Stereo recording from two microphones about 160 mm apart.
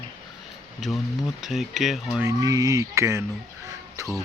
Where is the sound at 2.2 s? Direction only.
20° right (ahead or behind).